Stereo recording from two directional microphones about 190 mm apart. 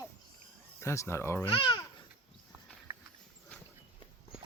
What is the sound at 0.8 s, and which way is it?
Speech, 15° left (ahead or behind).